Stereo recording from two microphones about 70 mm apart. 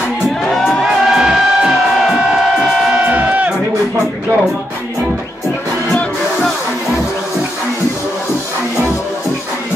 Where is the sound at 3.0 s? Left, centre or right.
Centre.